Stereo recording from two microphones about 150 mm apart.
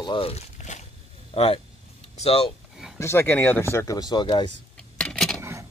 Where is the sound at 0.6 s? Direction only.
55° left (ahead or behind).